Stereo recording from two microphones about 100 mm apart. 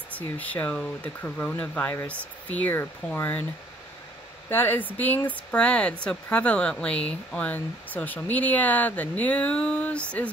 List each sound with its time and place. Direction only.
0.4 s speech: 15° left (ahead or behind)
4.5 s speech: 20° left (ahead or behind)